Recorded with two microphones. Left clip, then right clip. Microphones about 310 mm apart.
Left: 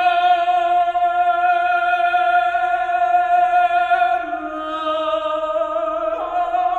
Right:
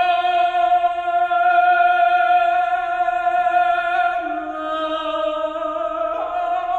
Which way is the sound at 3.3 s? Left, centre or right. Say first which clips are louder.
Left 2 dB; left.